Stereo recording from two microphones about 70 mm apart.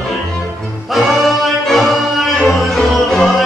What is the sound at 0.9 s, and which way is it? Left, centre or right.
Music, centre.